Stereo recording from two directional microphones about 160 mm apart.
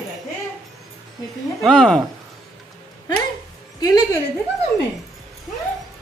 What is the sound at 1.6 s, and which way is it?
Speech, 5° left (ahead or behind).